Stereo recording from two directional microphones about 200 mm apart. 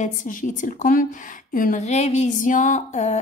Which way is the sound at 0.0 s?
40° left (ahead or behind).